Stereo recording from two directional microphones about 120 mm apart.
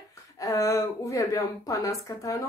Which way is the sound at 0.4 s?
30° left (ahead or behind).